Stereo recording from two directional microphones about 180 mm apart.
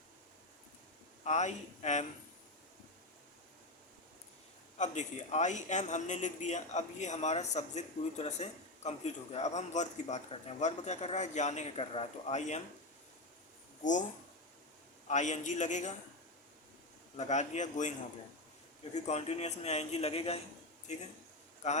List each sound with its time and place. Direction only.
1.2 s a man's voice: 40° left (ahead or behind)
4.8 s a man's voice: 40° left (ahead or behind)
15.0 s a man's voice: 40° left (ahead or behind)
17.2 s a man's voice: 40° left (ahead or behind)
18.9 s a man's voice: 35° left (ahead or behind)